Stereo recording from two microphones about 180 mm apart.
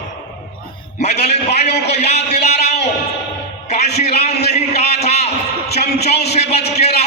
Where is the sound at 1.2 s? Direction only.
40° left (ahead or behind).